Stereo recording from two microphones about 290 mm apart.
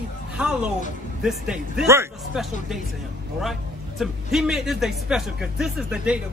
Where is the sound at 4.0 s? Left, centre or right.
Centre.